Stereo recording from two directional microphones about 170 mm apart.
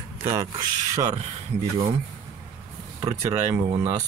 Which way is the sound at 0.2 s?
15° right (ahead or behind).